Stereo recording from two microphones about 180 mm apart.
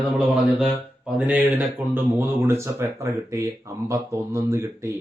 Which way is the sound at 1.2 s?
10° right (ahead or behind).